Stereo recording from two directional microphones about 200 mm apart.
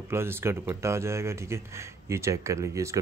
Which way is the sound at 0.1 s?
10° right (ahead or behind).